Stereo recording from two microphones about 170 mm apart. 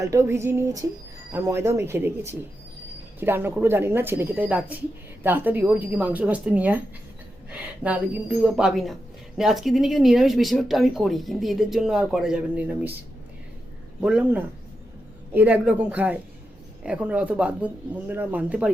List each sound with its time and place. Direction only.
0.0 s speech: 15° right (ahead or behind)
14.0 s speech: 5° right (ahead or behind)